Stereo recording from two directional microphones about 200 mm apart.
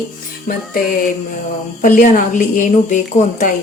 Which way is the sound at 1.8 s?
40° left (ahead or behind).